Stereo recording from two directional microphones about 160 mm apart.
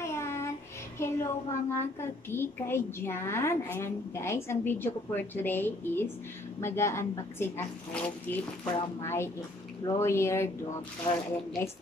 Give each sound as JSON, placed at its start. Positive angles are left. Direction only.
{"t": 0.0, "sound": "child singing", "side_deg": 15}
{"t": 0.9, "sound": "a woman's voice", "side_deg": 15}
{"t": 11.1, "sound": "speech", "side_deg": 30}